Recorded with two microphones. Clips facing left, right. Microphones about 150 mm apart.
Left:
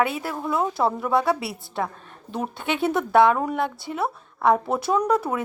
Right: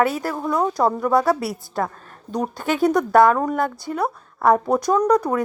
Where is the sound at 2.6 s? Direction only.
40° right (ahead or behind).